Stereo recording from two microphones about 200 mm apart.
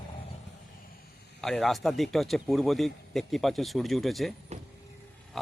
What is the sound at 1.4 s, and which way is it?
A man's voice, centre (ahead or behind).